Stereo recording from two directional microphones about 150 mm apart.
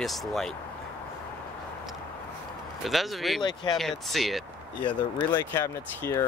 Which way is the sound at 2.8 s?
Centre (ahead or behind).